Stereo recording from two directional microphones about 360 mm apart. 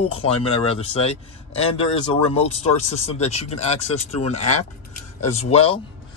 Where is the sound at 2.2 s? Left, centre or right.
Centre.